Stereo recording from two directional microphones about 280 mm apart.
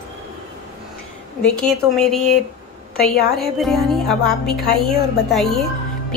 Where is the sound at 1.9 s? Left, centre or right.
Centre.